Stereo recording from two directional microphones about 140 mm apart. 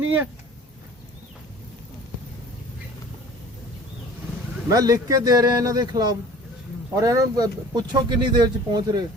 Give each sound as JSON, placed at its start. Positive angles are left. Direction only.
{"t": 0.0, "sound": "speech", "side_deg": -15}
{"t": 4.7, "sound": "speech", "side_deg": -25}